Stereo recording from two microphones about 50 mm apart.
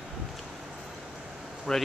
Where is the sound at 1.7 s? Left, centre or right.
Centre.